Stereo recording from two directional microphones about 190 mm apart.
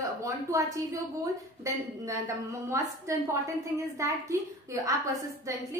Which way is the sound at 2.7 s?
15° right (ahead or behind).